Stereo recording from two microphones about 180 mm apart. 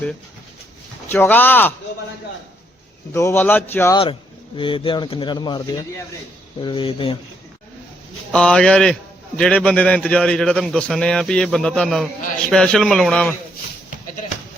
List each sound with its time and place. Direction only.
1.0 s a man's voice: 10° left (ahead or behind)
3.1 s a man's voice: 15° left (ahead or behind)
3.9 s speech: 30° left (ahead or behind)
8.3 s a man's voice: 5° left (ahead or behind)